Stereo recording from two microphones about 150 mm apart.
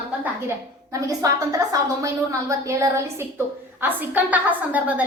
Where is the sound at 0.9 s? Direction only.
20° right (ahead or behind).